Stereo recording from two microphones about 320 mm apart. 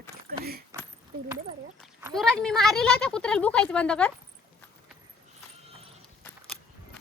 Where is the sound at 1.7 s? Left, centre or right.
Centre.